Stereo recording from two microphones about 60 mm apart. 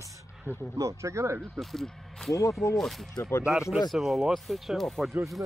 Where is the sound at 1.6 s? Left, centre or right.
Centre.